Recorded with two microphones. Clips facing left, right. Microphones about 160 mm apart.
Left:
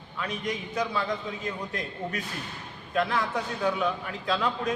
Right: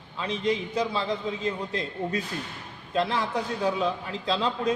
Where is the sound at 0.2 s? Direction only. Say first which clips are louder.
Right 5 dB; 25° right (ahead or behind).